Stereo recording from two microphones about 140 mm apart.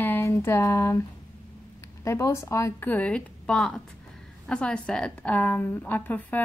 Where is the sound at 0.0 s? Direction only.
15° left (ahead or behind).